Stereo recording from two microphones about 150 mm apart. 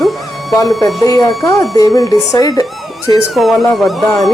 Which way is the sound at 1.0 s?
25° left (ahead or behind).